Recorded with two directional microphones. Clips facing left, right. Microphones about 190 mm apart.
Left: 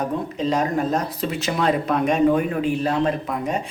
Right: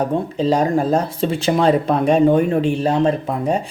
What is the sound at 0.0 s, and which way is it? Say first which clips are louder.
Speech: right 5 dB; 30° right (ahead or behind).